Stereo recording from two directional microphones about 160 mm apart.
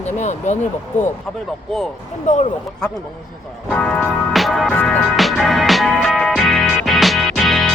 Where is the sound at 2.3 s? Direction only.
45° left (ahead or behind).